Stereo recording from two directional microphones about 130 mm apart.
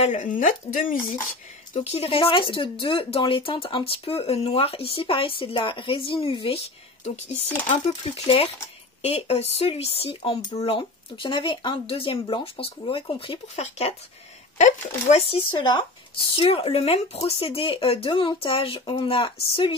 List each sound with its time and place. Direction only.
0.0 s speech: 75° left (ahead or behind); by 1.1 s 90° left
1.7 s speech: 50° left (ahead or behind)
7.1 s speech: 65° left (ahead or behind)
15.0 s speech: 50° left (ahead or behind)